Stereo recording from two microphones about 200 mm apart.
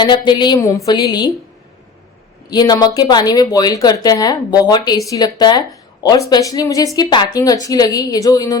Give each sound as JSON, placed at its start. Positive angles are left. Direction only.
{"t": 0.0, "sound": "speech", "side_deg": 20}
{"t": 2.5, "sound": "speech", "side_deg": 20}